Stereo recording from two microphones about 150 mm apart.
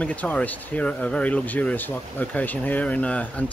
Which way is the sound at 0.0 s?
10° left (ahead or behind).